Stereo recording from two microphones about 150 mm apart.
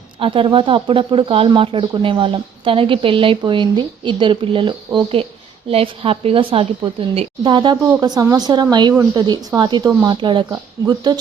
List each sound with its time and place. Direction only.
0.2 s speech: 35° right (ahead or behind)